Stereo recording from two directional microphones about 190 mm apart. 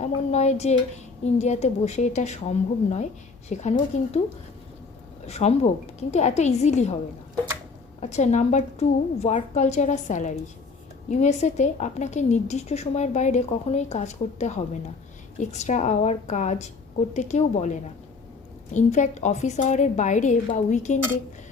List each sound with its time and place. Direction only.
0.0 s a woman's voice: 35° left (ahead or behind)
5.2 s a woman's voice: 35° left (ahead or behind)
8.0 s a woman's voice: 35° left (ahead or behind)